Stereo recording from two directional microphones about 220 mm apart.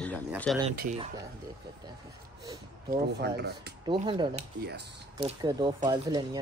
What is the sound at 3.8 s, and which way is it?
Speech, 25° right (ahead or behind).